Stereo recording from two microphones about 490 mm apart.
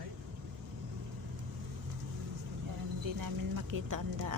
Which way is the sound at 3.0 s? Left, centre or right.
Right.